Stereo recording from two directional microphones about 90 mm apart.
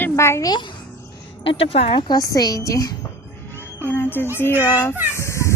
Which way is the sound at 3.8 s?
25° left (ahead or behind).